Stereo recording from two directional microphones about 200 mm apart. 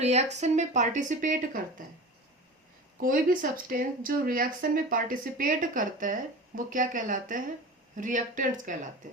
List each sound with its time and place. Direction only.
0.0 s speech: 35° right (ahead or behind)
3.0 s speech: 45° right (ahead or behind)